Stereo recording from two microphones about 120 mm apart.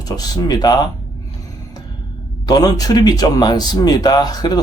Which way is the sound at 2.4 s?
30° left (ahead or behind).